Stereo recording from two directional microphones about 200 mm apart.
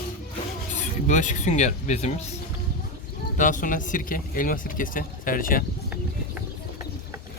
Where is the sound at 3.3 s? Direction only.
40° left (ahead or behind).